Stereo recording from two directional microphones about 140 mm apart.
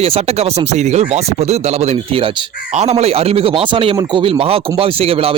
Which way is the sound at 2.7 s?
50° right (ahead or behind).